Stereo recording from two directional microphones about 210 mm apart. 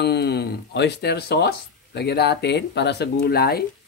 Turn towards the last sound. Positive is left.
turn(degrees=45)  # may be behind; listen again after turning